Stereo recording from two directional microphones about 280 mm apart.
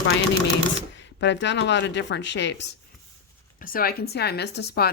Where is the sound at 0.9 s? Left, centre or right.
Left.